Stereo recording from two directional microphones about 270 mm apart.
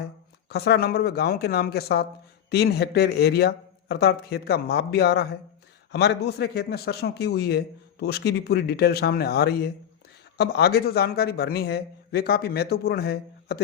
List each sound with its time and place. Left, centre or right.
0.0 s a man's voice: left